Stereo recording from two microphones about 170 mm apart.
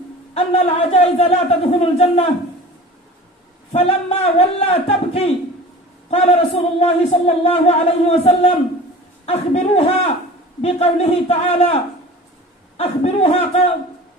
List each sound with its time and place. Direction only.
0.3 s speech: 40° left (ahead or behind)
3.7 s speech: 40° left (ahead or behind)